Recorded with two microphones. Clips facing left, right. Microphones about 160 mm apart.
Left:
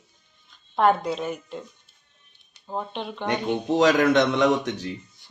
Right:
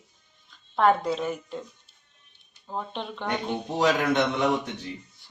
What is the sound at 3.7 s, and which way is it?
Speech, 90° left.